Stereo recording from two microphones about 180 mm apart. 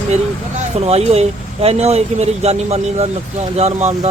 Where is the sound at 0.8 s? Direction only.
35° right (ahead or behind).